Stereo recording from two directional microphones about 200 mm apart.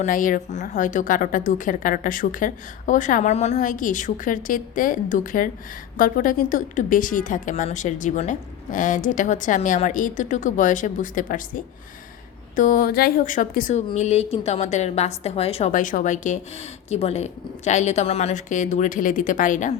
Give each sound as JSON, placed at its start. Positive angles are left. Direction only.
{"t": 0.0, "sound": "a woman's voice", "side_deg": 40}